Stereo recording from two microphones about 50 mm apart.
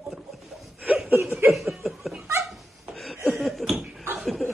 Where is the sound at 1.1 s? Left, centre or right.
Right.